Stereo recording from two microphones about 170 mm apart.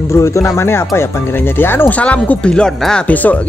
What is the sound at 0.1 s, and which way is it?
Speech, 15° left (ahead or behind).